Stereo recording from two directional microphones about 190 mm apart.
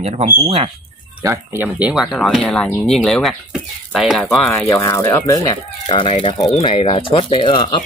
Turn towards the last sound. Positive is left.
turn(degrees=25)  # may be behind; listen again after turning